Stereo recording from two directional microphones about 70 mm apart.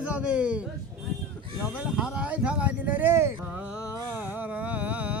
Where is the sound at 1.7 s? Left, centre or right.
Centre; by 3.4 s right.